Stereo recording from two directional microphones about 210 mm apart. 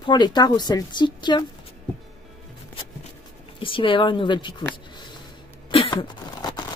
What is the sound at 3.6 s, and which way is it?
A woman's voice, 25° left (ahead or behind).